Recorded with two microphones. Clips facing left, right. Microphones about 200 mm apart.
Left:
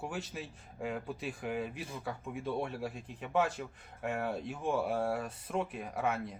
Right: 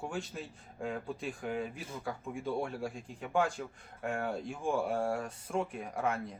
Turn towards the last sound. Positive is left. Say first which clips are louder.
# even
turn(degrees=5)  # may be behind; listen again after turning